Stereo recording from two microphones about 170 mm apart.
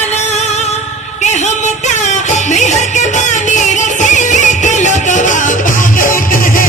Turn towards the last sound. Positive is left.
turn(degrees=55)  # may be behind; listen again after turning